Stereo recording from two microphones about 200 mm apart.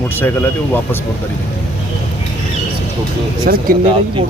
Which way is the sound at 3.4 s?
45° right (ahead or behind).